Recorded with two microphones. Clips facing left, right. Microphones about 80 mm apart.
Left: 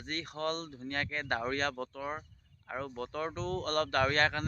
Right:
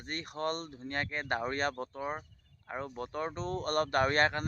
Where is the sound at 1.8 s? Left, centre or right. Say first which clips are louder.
Right 1 dB; right.